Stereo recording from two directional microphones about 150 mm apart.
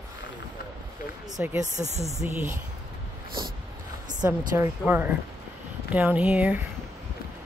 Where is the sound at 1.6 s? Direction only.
50° right (ahead or behind).